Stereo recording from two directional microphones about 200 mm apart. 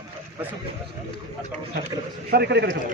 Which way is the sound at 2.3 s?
55° right (ahead or behind).